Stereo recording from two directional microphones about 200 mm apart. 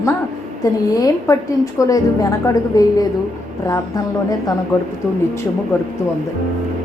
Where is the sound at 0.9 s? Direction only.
15° left (ahead or behind).